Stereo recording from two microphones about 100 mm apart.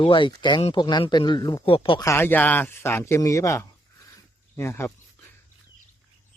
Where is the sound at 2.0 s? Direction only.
30° left (ahead or behind).